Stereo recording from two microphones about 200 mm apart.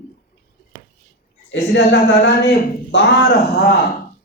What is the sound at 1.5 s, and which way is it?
A woman's voice, 60° left (ahead or behind).